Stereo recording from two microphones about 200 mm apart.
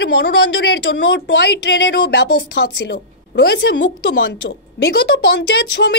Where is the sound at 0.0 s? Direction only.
55° left (ahead or behind).